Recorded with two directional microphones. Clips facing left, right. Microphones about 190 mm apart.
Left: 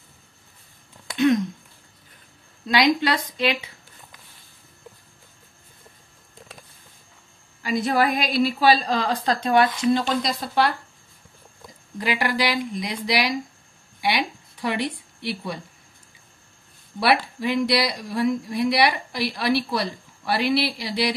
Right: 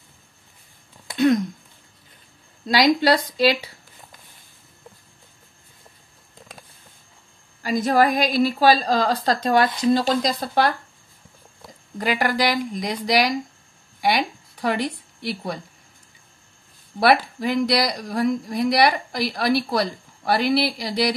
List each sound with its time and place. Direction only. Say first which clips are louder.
1.1 s speech: right 1 dB; 35° right (ahead or behind)
2.6 s a woman's voice: right 2 dB; 40° right (ahead or behind)
7.6 s a woman's voice: right 3 dB; 40° right (ahead or behind)
12.0 s a woman's voice: right 2 dB; 45° right (ahead or behind)
17.0 s a woman's voice: right 3 dB; 45° right (ahead or behind)